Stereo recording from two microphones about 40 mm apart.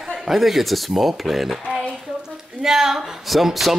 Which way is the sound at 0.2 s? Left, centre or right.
Centre.